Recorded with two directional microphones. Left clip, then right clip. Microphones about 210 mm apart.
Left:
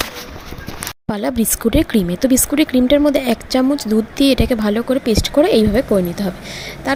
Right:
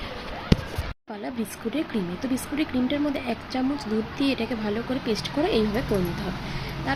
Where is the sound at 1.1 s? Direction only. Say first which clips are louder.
Left 14 dB; 50° left (ahead or behind).